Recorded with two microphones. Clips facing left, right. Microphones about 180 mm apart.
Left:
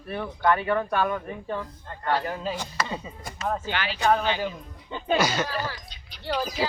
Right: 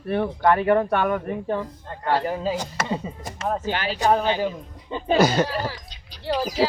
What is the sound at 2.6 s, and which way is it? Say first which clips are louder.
Speech: right 4 dB; 40° right (ahead or behind).